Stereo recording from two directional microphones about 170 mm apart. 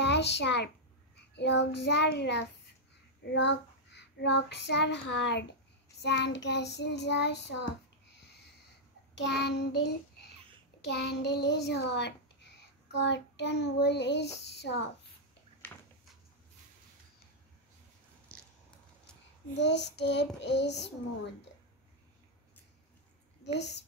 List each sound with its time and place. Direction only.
0.0 s a child's voice: 90° left
1.3 s child singing: 90° left
9.2 s child singing: 80° left
19.5 s child singing: 90° left
23.4 s a woman's voice: 85° left